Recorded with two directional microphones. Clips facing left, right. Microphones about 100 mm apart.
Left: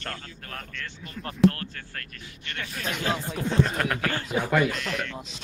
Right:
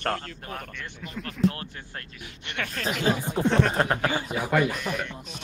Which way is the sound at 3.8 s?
25° right (ahead or behind).